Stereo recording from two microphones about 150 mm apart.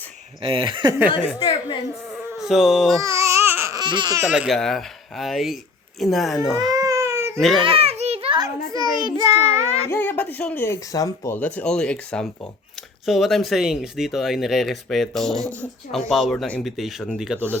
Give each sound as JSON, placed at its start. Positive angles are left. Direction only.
{"t": 0.4, "sound": "speech", "side_deg": -35}
{"t": 1.4, "sound": "a woman's voice", "side_deg": 35}
{"t": 2.0, "sound": "insect", "side_deg": -5}
{"t": 3.0, "sound": "babbling", "side_deg": -20}
{"t": 3.8, "sound": "speech", "side_deg": -30}
{"t": 4.2, "sound": "speech", "side_deg": -5}
{"t": 6.7, "sound": "baby cry", "side_deg": -20}
{"t": 7.3, "sound": "speech", "side_deg": 0}
{"t": 7.6, "sound": "children playing", "side_deg": -40}
{"t": 9.0, "sound": "child singing", "side_deg": -25}
{"t": 9.3, "sound": "child singing", "side_deg": 45}
{"t": 9.9, "sound": "speech", "side_deg": 10}
{"t": 11.3, "sound": "speech", "side_deg": 10}